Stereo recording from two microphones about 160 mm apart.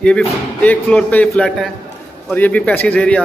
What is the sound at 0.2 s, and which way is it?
Speech, 10° left (ahead or behind).